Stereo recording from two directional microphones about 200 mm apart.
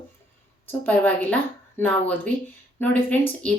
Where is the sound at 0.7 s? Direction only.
10° left (ahead or behind).